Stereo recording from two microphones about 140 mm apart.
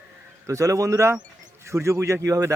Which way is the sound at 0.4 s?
25° right (ahead or behind).